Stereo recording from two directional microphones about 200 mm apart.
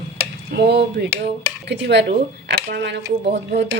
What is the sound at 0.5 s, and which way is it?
A woman's voice, 60° right (ahead or behind).